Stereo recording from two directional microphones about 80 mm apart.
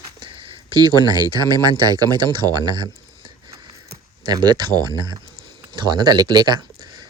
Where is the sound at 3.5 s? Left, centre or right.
Right.